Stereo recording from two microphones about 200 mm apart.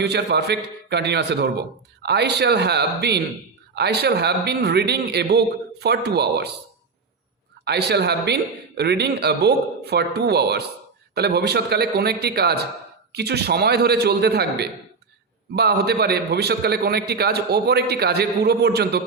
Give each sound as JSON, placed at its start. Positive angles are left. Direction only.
{"t": 0.0, "sound": "a man's voice", "side_deg": -55}
{"t": 7.6, "sound": "a man's voice", "side_deg": -55}